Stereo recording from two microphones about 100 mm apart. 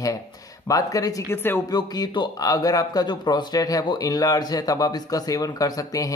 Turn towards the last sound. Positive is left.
turn(degrees=35)  # may be behind; listen again after turning